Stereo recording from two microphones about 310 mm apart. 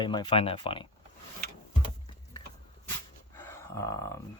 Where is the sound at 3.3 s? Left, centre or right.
Centre.